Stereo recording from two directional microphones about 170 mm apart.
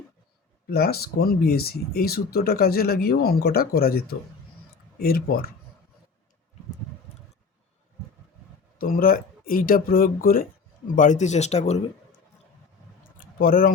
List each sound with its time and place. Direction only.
0.7 s speech: 65° left (ahead or behind)
8.8 s speech: 55° left (ahead or behind)
10.9 s speech: 45° left (ahead or behind)
13.1 s a sound: 55° left (ahead or behind)